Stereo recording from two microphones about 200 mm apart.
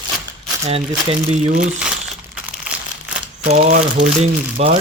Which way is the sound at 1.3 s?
35° right (ahead or behind).